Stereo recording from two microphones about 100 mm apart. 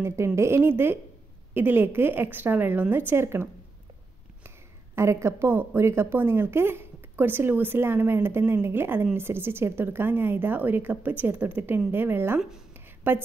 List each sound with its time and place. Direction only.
0.0 s a woman's voice: 25° right (ahead or behind)
4.9 s a woman's voice: 25° right (ahead or behind)
12.4 s speech: 5° right (ahead or behind)
12.7 s a sound: 20° right (ahead or behind)